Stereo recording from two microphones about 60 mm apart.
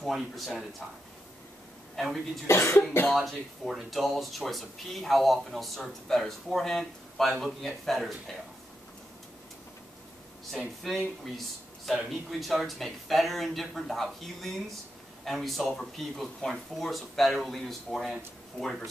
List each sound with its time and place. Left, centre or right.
0.0 s speech: centre
2.0 s a man's voice: centre
2.4 s cough: left
3.1 s speech: centre
10.6 s speech: centre